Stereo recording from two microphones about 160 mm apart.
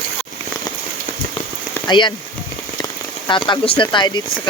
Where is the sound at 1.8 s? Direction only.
30° left (ahead or behind).